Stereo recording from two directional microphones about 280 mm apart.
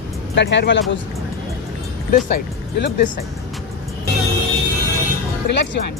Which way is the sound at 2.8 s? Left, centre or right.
Left.